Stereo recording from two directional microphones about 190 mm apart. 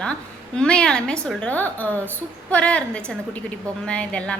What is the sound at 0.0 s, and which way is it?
A woman's voice, 5° left (ahead or behind).